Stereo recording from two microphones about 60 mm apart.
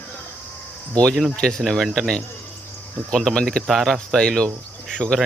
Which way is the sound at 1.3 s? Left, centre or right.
Centre.